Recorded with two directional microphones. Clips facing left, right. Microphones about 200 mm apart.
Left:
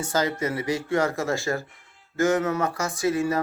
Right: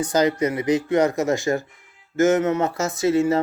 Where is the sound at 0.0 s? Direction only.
20° right (ahead or behind).